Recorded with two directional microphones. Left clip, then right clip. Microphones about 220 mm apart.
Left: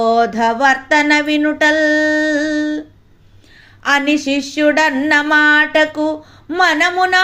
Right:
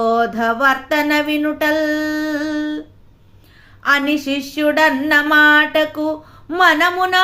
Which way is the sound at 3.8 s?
5° left (ahead or behind).